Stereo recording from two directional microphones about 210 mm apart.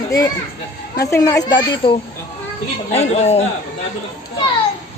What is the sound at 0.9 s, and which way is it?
Speech, 15° left (ahead or behind).